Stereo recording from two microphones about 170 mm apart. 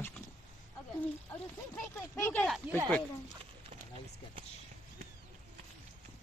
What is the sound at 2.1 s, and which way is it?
Speech, 15° left (ahead or behind).